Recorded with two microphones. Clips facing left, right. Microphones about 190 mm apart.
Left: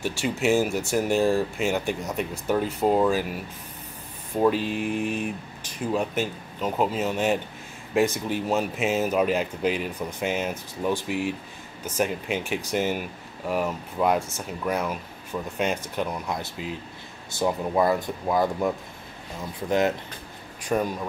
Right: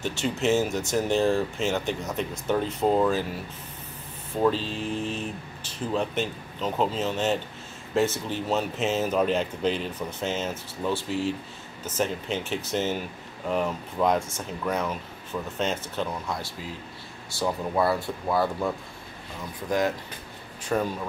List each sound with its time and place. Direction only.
0.0 s speech: 10° left (ahead or behind)
20.6 s speech: 15° left (ahead or behind)